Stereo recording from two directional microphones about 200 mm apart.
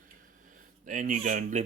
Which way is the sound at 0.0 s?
40° right (ahead or behind).